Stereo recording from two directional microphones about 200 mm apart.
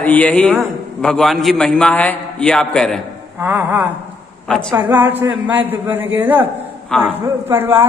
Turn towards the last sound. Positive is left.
turn(degrees=-10)  # may be behind; listen again after turning